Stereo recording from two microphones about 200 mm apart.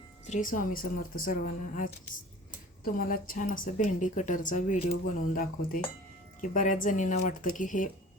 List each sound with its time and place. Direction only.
0.3 s a woman's voice: 40° left (ahead or behind)